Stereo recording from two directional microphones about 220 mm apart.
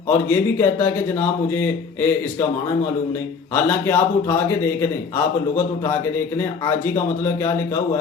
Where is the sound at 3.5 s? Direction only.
10° left (ahead or behind).